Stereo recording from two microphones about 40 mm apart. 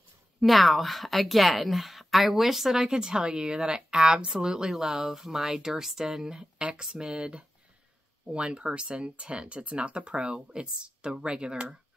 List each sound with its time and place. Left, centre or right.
0.4 s a woman's voice: centre
6.3 s speech: right